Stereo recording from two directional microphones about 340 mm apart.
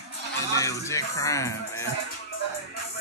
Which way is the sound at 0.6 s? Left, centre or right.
Centre.